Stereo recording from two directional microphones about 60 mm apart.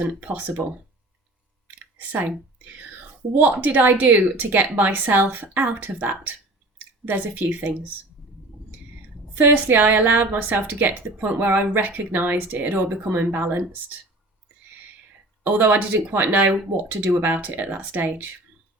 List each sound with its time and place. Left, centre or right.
0.0 s speech: right
2.0 s speech: right
3.3 s speech: right
9.4 s speech: right
15.4 s speech: right